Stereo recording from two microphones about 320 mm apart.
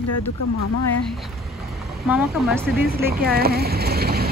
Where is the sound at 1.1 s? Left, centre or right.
Centre.